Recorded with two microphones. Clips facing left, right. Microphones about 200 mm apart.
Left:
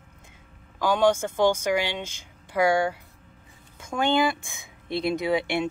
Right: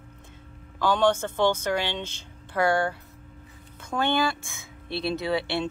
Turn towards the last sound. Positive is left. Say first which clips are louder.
# left 2 dB
turn(degrees=15)  # may be behind; listen again after turning